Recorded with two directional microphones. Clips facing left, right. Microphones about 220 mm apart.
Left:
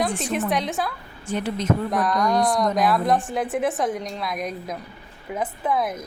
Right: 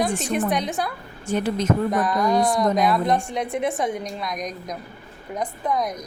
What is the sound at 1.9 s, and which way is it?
A woman's voice, centre (ahead or behind).